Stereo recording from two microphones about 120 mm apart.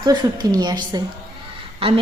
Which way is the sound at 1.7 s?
50° right (ahead or behind).